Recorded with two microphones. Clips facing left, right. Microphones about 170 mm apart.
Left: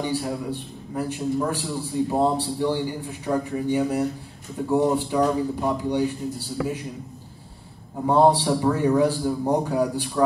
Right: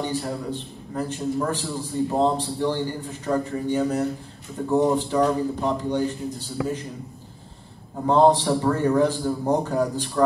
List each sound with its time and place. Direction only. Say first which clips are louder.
0.0 s a man's voice: left 1 dB; 5° left (ahead or behind)
8.0 s a man's voice: right 1 dB; 10° left (ahead or behind)